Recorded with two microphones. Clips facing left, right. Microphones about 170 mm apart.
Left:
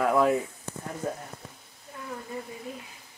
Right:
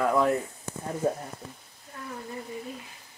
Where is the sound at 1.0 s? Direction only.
35° right (ahead or behind).